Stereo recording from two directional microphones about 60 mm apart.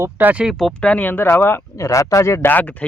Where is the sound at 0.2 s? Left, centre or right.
Right.